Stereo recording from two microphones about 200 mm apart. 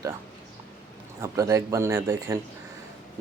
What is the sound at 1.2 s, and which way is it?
Speech, 15° right (ahead or behind).